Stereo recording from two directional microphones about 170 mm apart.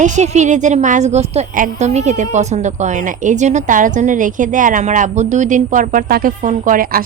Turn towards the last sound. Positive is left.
turn(degrees=-55)  # may be behind; listen again after turning